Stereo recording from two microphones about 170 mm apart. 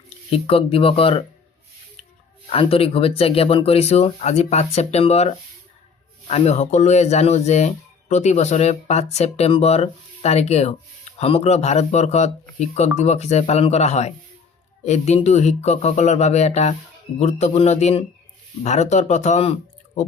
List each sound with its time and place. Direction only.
0.3 s speech: 35° left (ahead or behind)
2.5 s speech: 35° left (ahead or behind)